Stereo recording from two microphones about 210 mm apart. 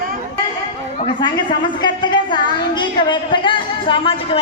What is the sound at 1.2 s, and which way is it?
A woman's voice, 20° left (ahead or behind).